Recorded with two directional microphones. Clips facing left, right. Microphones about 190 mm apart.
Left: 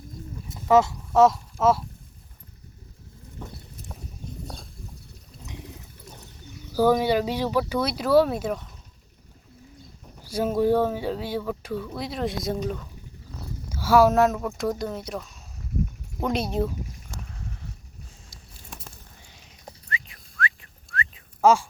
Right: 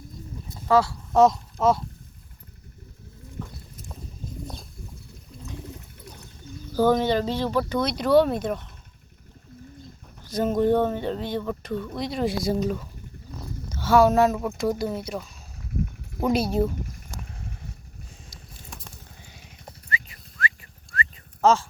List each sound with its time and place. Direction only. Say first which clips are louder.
0.7 s speech: left 2 dB; 20° left (ahead or behind)
1.1 s speech: even; 5° left (ahead or behind)
6.7 s speech: even; 10° left (ahead or behind)
10.2 s speech: right 1 dB; 10° left (ahead or behind)
13.7 s speech: even; 10° left (ahead or behind)
19.6 s dog: right 2 dB; centre (ahead or behind)
21.4 s speech: left 1 dB; 10° left (ahead or behind)